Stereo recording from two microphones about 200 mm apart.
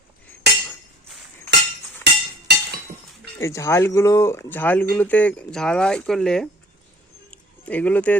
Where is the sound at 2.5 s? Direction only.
55° right (ahead or behind).